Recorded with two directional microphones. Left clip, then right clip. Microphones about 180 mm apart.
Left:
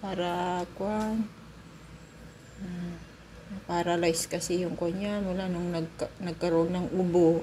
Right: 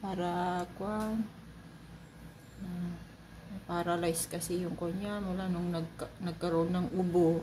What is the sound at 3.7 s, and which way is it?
Speech, 5° left (ahead or behind).